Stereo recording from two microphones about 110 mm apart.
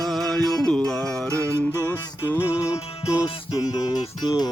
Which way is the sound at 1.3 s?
25° right (ahead or behind).